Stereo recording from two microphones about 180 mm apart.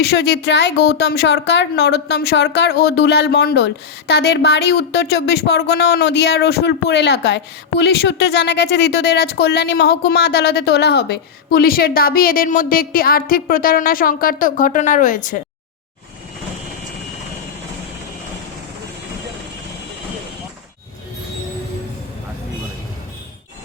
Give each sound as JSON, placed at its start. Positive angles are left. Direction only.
{"t": 0.0, "sound": "speech", "side_deg": 65}